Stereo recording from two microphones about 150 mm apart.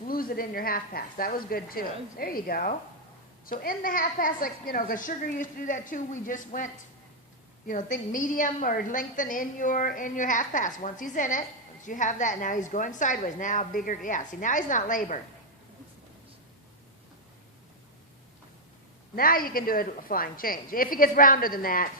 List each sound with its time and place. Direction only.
0.1 s a woman's voice: 75° left (ahead or behind)
7.7 s a woman's voice: 60° left (ahead or behind)
19.1 s a woman's voice: 75° left (ahead or behind)